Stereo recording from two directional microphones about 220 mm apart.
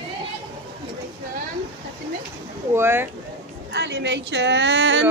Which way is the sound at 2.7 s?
10° right (ahead or behind).